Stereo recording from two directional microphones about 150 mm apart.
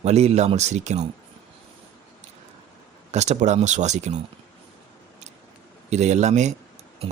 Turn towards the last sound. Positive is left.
turn(degrees=-50)  # may be behind; listen again after turning